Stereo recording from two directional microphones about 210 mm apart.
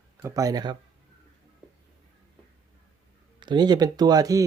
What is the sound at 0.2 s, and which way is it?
Speech, 15° right (ahead or behind).